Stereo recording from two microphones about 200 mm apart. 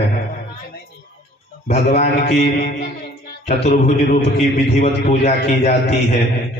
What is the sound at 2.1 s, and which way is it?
Mantra, 50° left (ahead or behind).